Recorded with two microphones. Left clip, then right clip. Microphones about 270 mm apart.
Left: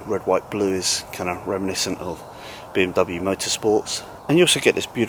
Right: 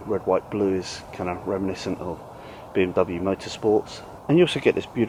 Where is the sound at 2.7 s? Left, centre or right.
Centre.